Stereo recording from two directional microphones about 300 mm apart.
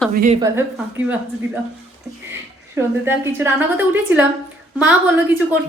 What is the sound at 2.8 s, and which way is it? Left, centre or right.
A woman's voice, centre.